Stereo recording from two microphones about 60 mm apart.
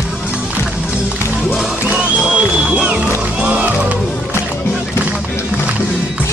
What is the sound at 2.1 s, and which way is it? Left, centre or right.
Music, centre.